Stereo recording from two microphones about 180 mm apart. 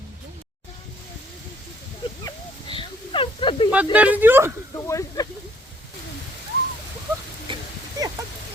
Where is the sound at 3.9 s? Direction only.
10° right (ahead or behind).